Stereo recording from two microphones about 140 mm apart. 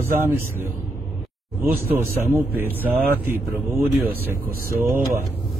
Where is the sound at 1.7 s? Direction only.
15° right (ahead or behind).